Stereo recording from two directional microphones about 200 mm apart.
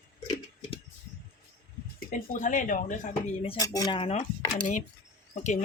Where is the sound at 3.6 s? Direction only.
20° left (ahead or behind).